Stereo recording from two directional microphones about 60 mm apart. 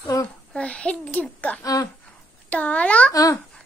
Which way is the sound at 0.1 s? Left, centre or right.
Left.